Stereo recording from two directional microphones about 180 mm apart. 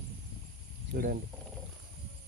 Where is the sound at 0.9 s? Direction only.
55° right (ahead or behind).